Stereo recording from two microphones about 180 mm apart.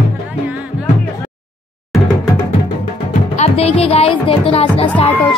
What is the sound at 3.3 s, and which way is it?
Speech, 35° left (ahead or behind).